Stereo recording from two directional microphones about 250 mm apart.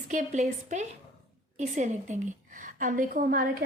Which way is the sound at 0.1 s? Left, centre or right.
Right.